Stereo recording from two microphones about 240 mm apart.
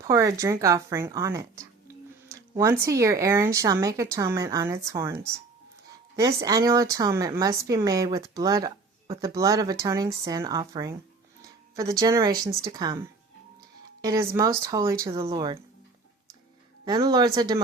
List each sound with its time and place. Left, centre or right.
0.0 s speech: centre
14.0 s speech: centre
16.8 s speech: centre